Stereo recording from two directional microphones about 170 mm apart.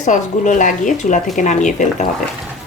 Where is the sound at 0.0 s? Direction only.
45° left (ahead or behind).